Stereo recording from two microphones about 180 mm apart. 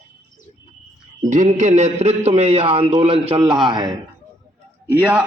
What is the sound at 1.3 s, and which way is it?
A man's voice, 45° right (ahead or behind).